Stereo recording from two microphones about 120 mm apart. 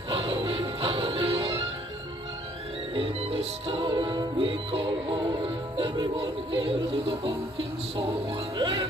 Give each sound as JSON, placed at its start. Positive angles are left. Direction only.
{"t": 0.2, "sound": "music", "side_deg": -50}
{"t": 2.9, "sound": "music", "side_deg": -55}
{"t": 8.5, "sound": "speech", "side_deg": -45}